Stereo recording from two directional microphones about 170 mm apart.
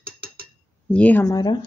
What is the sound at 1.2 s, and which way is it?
Speech, 20° left (ahead or behind).